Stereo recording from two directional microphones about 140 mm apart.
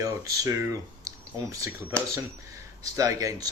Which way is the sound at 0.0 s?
25° right (ahead or behind).